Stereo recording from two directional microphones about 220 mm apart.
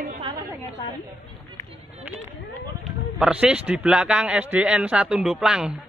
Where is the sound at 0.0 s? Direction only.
35° right (ahead or behind).